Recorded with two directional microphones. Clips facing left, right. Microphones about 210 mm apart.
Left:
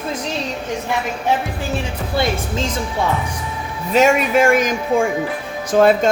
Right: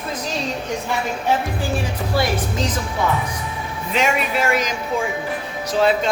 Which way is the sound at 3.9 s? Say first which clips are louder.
Left 7 dB; 50° left (ahead or behind).